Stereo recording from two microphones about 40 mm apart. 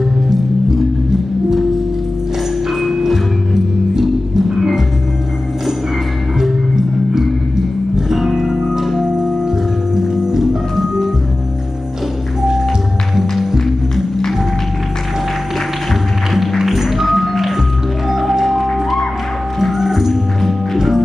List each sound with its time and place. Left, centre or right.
2.8 s music: centre
7.9 s music: centre
16.3 s music: centre
18.7 s music: centre
19.6 s music: centre